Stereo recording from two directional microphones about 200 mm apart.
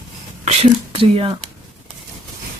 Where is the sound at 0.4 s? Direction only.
30° right (ahead or behind).